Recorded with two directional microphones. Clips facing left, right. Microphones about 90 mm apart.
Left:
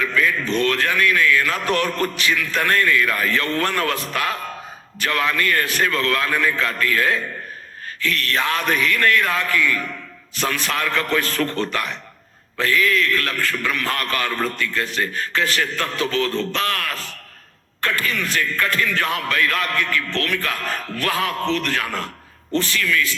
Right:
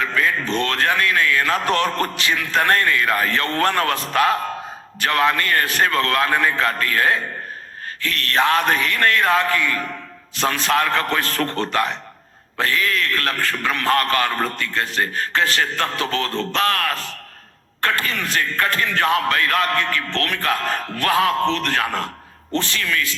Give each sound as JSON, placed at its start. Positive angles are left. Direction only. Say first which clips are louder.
{"t": 0.0, "sound": "speech", "louder": "even", "side_deg": -30}
{"t": 0.6, "sound": "a man's voice", "louder": "left 1 dB", "side_deg": -35}